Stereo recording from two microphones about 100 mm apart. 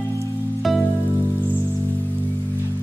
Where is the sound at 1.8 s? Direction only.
20° left (ahead or behind).